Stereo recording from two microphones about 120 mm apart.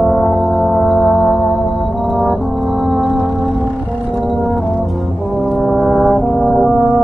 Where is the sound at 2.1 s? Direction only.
10° right (ahead or behind).